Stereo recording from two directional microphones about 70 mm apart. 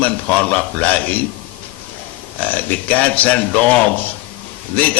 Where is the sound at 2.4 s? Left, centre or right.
Left.